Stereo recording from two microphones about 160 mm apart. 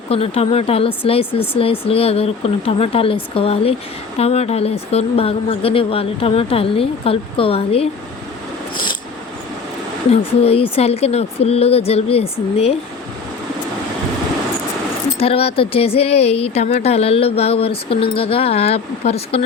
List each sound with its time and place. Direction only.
0.1 s speech: 40° left (ahead or behind)
8.7 s a sound: 30° left (ahead or behind)
10.1 s speech: 40° left (ahead or behind)
15.2 s speech: 35° left (ahead or behind)